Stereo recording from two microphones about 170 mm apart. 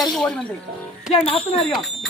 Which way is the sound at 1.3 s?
35° left (ahead or behind).